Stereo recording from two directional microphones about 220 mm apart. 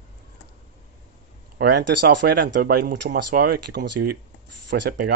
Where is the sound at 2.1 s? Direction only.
50° right (ahead or behind).